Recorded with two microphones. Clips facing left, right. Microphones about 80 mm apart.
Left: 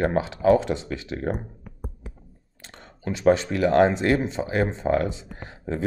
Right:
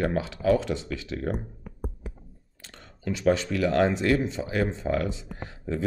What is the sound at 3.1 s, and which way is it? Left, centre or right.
Speech, left.